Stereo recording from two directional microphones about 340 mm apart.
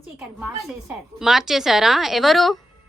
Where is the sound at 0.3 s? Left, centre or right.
Centre.